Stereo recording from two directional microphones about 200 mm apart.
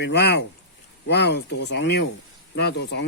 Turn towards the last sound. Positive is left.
turn(degrees=60)  # may be behind; listen again after turning